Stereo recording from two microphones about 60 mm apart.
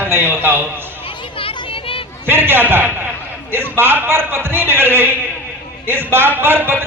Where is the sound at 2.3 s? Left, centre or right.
Right.